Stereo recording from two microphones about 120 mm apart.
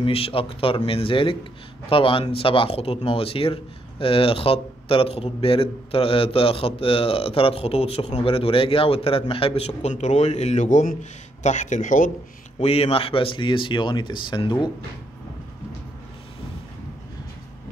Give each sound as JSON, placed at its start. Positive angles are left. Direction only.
{"t": 0.0, "sound": "a man's voice", "side_deg": 50}
{"t": 12.5, "sound": "a man's voice", "side_deg": 60}